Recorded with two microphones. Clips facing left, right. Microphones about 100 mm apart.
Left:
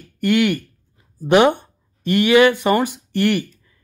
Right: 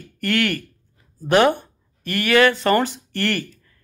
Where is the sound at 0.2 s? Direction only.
15° left (ahead or behind).